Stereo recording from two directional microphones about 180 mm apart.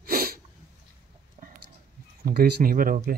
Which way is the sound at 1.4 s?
35° right (ahead or behind).